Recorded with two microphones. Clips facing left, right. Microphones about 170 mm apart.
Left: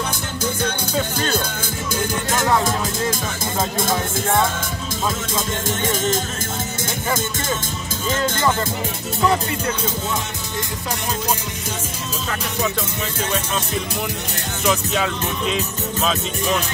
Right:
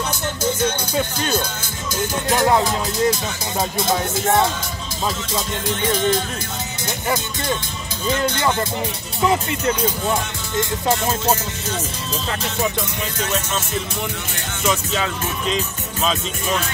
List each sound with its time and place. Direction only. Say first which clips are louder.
5.7 s music: right 3 dB; 45° left (ahead or behind)
8.1 s music: right 1 dB; 45° left (ahead or behind)
14.6 s speech: left 1 dB; centre (ahead or behind)